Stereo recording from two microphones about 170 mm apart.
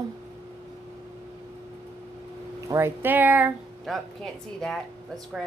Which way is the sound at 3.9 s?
Centre (ahead or behind).